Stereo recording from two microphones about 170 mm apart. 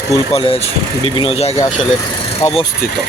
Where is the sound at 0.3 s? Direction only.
35° left (ahead or behind).